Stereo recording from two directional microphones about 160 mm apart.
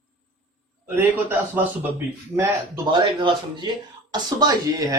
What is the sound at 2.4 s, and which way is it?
A man's voice, 25° right (ahead or behind).